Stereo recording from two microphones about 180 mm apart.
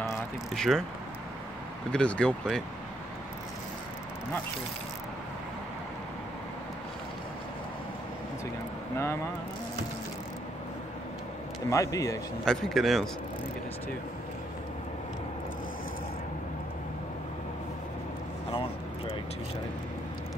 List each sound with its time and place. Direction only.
0.6 s speech: 5° left (ahead or behind)
1.9 s speech: 5° left (ahead or behind)
8.9 s speech: 15° left (ahead or behind)
11.7 s speech: 15° left (ahead or behind)
12.4 s speech: 5° left (ahead or behind)
18.5 s vehicle: 30° left (ahead or behind)